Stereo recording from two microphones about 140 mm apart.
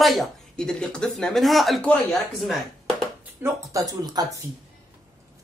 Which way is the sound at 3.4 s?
25° right (ahead or behind).